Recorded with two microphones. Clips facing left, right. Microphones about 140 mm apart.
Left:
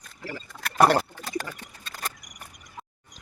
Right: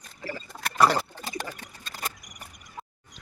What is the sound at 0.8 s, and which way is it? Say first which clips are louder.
Speech: left 3 dB; 55° left (ahead or behind).